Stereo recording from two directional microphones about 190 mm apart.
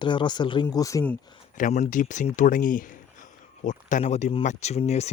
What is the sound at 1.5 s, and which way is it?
Speech, 40° left (ahead or behind).